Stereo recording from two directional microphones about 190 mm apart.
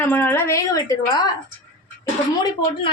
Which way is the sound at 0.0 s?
10° left (ahead or behind).